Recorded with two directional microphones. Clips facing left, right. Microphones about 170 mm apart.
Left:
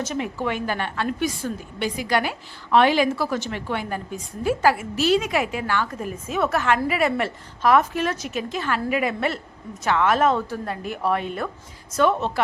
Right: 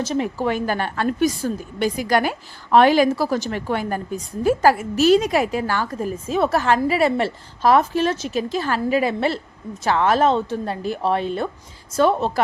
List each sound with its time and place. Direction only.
0.0 s a woman's voice: 35° right (ahead or behind)